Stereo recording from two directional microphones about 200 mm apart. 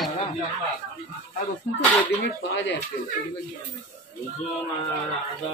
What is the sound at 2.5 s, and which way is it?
Speech, 65° left (ahead or behind).